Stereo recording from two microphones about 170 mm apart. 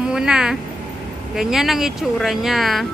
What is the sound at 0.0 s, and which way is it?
Speech, 5° right (ahead or behind).